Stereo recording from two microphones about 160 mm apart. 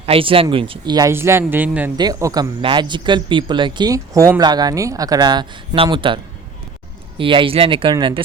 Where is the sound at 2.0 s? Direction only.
20° right (ahead or behind).